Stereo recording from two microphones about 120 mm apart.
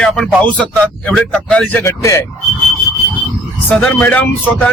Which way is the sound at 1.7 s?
20° left (ahead or behind).